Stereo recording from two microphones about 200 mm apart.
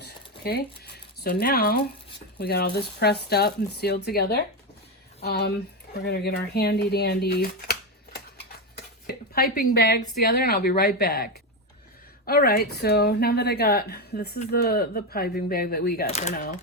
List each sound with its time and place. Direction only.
0.0 s a sound: 50° left (ahead or behind)
2.4 s speech: 50° left (ahead or behind)
16.0 s speech: 35° left (ahead or behind)
16.3 s speech: 45° left (ahead or behind)